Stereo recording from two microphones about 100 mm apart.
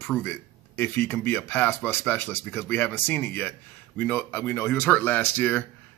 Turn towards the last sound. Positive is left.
turn(degrees=20)  # may be behind; listen again after turning